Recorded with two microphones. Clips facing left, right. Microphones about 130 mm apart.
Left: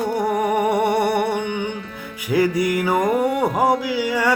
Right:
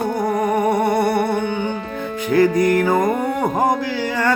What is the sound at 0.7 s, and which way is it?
Humming, 10° left (ahead or behind).